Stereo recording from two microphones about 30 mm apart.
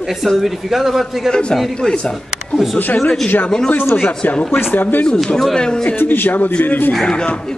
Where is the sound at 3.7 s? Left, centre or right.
Left.